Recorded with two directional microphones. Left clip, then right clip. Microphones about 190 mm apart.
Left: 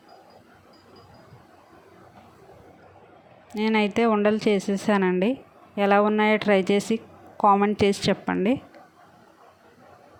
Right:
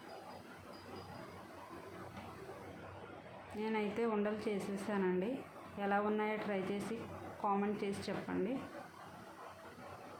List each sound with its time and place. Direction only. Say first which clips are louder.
3.6 s a woman's voice: left 15 dB; 50° left (ahead or behind)